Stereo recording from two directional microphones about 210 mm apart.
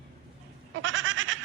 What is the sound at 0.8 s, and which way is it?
Goat, 65° right (ahead or behind).